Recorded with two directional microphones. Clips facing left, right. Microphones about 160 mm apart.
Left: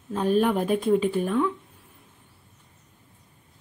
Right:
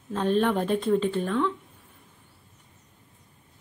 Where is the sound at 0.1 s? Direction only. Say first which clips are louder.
Left 2 dB; 10° left (ahead or behind).